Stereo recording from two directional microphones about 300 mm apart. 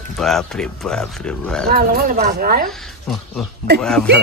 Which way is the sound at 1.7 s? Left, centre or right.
Right.